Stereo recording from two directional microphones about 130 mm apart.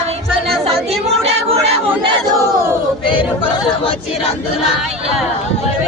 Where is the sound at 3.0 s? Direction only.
40° left (ahead or behind).